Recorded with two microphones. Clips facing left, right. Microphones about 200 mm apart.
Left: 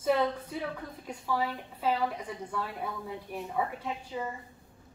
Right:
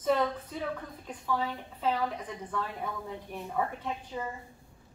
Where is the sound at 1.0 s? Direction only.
10° left (ahead or behind).